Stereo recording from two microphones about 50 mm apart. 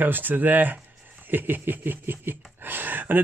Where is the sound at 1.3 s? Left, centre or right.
Right.